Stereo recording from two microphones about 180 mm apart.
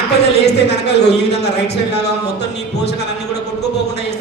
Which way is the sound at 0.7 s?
70° left (ahead or behind).